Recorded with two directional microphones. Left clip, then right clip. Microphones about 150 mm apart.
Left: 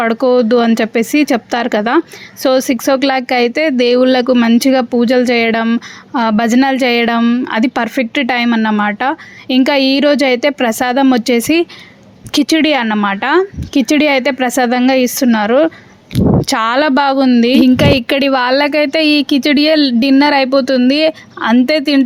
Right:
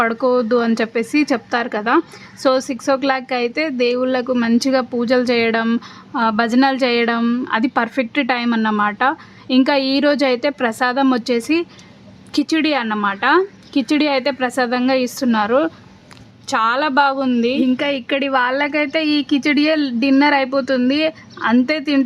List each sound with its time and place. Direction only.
0.0 s speech: 20° left (ahead or behind)
7.2 s speech: 10° left (ahead or behind)
7.4 s speech: 20° left (ahead or behind)
16.5 s a woman's voice: 40° left (ahead or behind)